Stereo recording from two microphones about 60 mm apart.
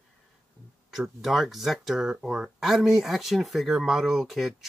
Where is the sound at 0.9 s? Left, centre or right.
Centre.